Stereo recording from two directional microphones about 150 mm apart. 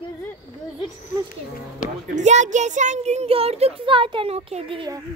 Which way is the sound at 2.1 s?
50° right (ahead or behind).